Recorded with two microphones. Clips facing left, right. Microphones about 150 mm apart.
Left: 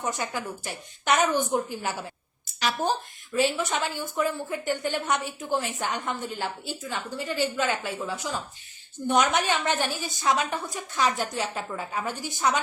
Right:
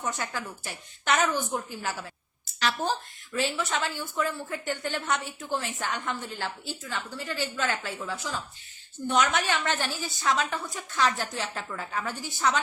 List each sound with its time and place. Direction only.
0.0 s a woman's voice: 15° left (ahead or behind)